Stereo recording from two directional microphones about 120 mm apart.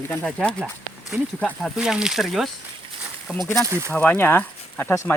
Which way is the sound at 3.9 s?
15° left (ahead or behind).